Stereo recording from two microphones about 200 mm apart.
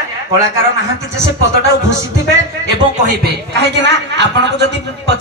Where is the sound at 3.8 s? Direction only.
60° right (ahead or behind).